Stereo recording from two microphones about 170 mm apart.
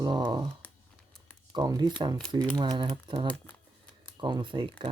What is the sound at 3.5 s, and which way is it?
Shuffling cards, 10° left (ahead or behind).